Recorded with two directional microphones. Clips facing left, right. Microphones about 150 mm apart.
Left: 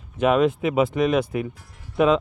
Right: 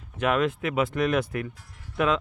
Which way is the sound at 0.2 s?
25° left (ahead or behind).